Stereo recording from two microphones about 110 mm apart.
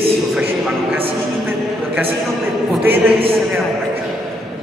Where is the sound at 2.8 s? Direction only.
20° right (ahead or behind).